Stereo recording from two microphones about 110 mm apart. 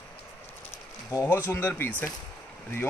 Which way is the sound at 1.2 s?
20° left (ahead or behind).